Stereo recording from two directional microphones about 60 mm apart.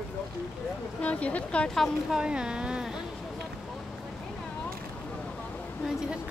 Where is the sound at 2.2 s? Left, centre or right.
Centre.